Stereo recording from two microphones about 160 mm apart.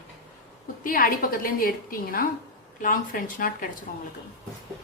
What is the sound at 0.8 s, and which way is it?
A woman's voice, 65° left (ahead or behind).